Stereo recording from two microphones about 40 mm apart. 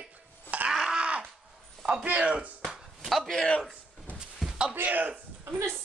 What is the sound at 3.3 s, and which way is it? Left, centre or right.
Speech, left.